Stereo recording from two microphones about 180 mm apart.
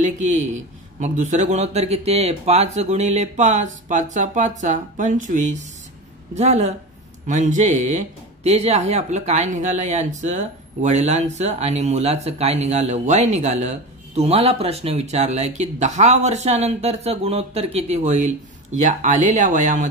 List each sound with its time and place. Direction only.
0.0 s speech: 40° right (ahead or behind)